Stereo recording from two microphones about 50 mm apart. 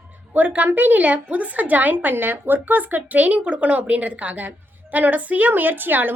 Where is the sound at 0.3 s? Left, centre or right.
Right.